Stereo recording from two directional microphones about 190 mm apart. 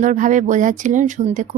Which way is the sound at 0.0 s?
40° right (ahead or behind).